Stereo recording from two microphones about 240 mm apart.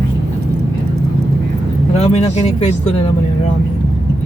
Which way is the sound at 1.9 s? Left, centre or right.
Left.